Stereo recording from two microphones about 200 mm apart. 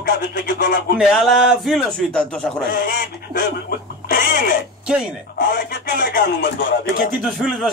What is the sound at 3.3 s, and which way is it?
Speech, 45° left (ahead or behind).